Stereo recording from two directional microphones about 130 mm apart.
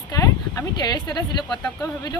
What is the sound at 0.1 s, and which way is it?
Speech, 25° left (ahead or behind).